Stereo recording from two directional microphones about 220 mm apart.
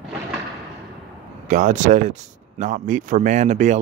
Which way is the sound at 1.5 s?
35° right (ahead or behind).